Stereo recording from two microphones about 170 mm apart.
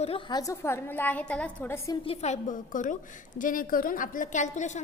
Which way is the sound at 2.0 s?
35° left (ahead or behind).